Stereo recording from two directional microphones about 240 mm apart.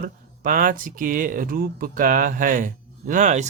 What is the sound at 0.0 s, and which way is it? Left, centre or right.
Speech, right.